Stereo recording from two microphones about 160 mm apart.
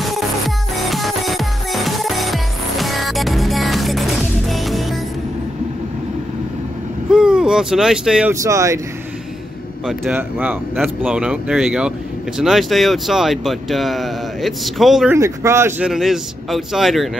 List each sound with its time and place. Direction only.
0.8 s music: centre (ahead or behind)
7.1 s a sound: 5° right (ahead or behind)
8.3 s speech: 20° right (ahead or behind)
10.1 s a man's voice: 15° right (ahead or behind)
15.1 s a man's voice: 20° right (ahead or behind)
15.8 s speech: centre (ahead or behind)